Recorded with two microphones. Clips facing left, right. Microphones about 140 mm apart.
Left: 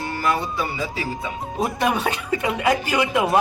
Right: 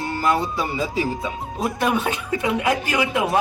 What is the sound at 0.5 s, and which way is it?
Speech, 20° right (ahead or behind).